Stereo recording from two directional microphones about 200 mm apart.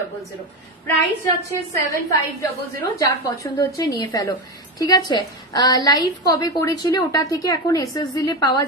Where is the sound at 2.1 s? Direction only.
15° left (ahead or behind).